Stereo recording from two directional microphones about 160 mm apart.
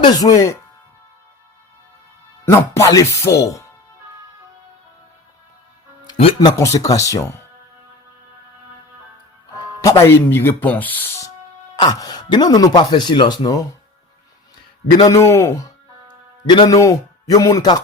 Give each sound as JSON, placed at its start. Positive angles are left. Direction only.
{"t": 0.0, "sound": "speech", "side_deg": 20}
{"t": 2.5, "sound": "speech", "side_deg": 20}
{"t": 6.1, "sound": "speech", "side_deg": 35}
{"t": 6.6, "sound": "speech", "side_deg": 20}
{"t": 10.0, "sound": "speech", "side_deg": 15}
{"t": 11.8, "sound": "speech", "side_deg": 25}
{"t": 14.9, "sound": "speech", "side_deg": 20}